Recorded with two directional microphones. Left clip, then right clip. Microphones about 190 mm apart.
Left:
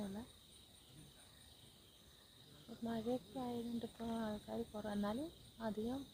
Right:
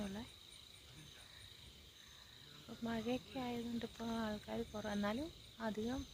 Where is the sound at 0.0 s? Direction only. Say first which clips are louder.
Right 2 dB; 25° right (ahead or behind).